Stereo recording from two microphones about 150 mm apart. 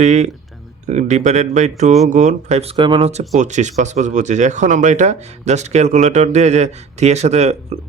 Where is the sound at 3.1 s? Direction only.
50° right (ahead or behind).